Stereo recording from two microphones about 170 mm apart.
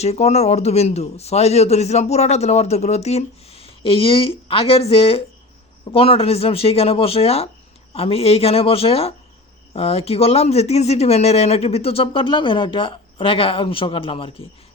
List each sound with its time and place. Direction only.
0.0 s speech: 40° left (ahead or behind)